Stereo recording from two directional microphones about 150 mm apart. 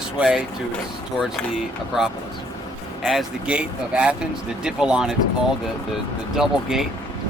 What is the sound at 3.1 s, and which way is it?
Speech, 5° right (ahead or behind).